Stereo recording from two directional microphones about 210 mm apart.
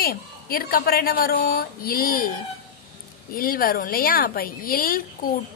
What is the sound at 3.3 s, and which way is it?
A woman's voice, 45° left (ahead or behind).